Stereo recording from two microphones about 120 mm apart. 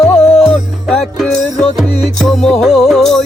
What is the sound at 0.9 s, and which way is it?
Music, centre (ahead or behind).